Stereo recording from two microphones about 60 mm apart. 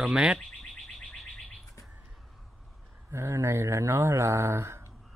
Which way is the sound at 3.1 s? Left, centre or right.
Right.